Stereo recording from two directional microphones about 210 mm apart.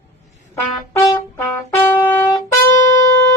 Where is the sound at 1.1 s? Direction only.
10° left (ahead or behind).